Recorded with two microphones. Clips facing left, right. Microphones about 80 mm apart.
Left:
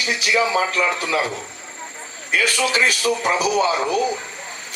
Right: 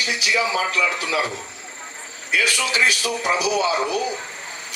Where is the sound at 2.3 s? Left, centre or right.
Left.